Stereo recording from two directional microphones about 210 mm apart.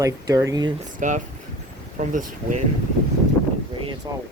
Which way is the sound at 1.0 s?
40° right (ahead or behind).